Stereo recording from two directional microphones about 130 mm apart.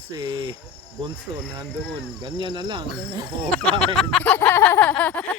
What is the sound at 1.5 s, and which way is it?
Speech, 35° right (ahead or behind).